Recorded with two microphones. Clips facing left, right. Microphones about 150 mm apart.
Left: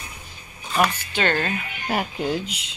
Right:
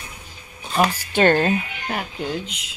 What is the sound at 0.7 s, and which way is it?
Speech, 35° right (ahead or behind).